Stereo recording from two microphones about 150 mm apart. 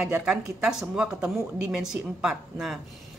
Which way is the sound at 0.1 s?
5° right (ahead or behind).